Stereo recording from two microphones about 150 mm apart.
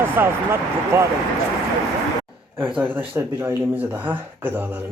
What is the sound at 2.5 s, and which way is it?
Speech, 10° right (ahead or behind).